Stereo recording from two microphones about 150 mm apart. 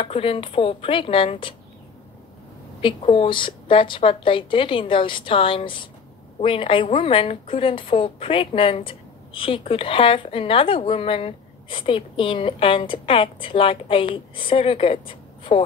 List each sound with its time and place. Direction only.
0.0 s speech: 40° left (ahead or behind)
2.8 s speech: 40° left (ahead or behind)